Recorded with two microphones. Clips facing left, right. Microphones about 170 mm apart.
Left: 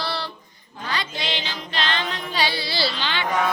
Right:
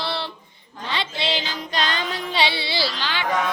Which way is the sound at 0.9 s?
30° right (ahead or behind).